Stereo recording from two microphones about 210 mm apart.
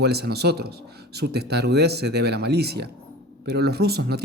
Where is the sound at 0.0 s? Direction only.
50° right (ahead or behind).